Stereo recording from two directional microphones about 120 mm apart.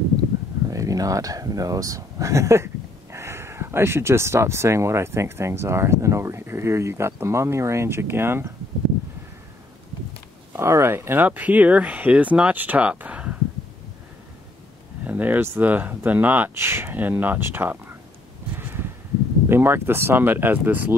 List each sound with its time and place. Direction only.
0.7 s speech: 30° right (ahead or behind)
10.5 s speech: 20° right (ahead or behind)
15.0 s speech: 15° right (ahead or behind)
18.6 s a sound: 20° right (ahead or behind)
19.5 s speech: 20° right (ahead or behind)